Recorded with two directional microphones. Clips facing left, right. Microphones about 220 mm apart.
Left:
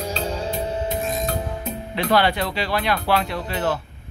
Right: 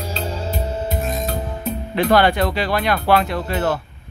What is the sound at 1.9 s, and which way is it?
Speech, 50° right (ahead or behind).